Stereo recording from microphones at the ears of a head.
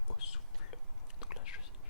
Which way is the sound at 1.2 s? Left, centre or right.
Left.